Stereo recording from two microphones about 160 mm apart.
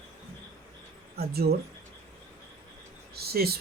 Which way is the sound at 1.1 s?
75° right (ahead or behind).